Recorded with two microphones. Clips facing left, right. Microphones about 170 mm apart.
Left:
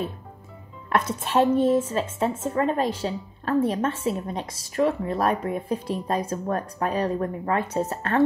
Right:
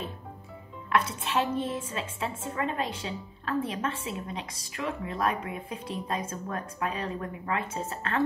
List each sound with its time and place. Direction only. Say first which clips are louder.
0.8 s speech: left 3 dB; 40° left (ahead or behind)